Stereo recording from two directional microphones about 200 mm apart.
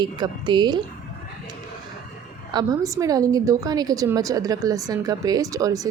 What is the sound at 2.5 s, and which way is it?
A woman's voice, 20° right (ahead or behind).